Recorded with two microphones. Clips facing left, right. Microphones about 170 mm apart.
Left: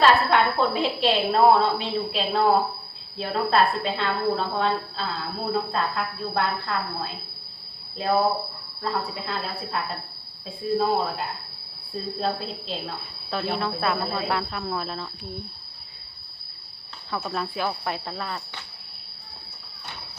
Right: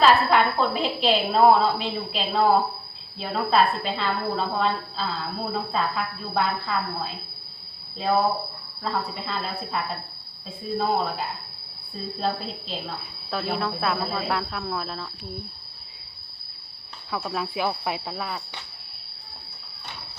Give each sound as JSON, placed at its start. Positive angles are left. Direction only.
{"t": 0.0, "sound": "a woman's voice", "side_deg": 0}
{"t": 17.1, "sound": "a woman's voice", "side_deg": -5}